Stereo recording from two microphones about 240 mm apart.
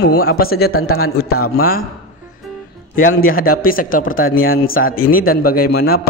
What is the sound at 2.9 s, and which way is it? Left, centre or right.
A man's voice, left.